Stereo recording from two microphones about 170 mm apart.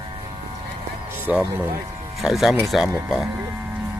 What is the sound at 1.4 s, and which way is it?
Speech, 15° right (ahead or behind).